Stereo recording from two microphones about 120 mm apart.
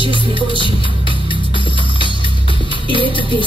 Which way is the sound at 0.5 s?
45° left (ahead or behind).